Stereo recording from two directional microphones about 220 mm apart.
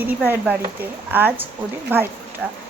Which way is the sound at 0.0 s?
10° right (ahead or behind).